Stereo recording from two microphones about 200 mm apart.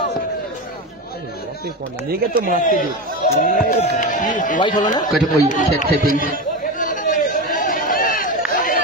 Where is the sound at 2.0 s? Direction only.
45° right (ahead or behind).